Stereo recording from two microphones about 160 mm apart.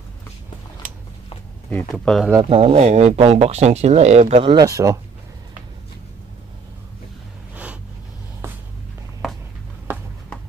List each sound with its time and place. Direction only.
1.7 s speech: 5° left (ahead or behind)
2.5 s speech: 40° right (ahead or behind)
4.6 s speech: 20° right (ahead or behind)